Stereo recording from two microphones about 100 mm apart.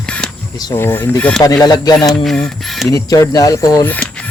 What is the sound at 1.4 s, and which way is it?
Speech, 40° left (ahead or behind).